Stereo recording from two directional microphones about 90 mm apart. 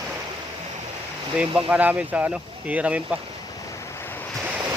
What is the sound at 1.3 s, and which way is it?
Speech, 10° right (ahead or behind).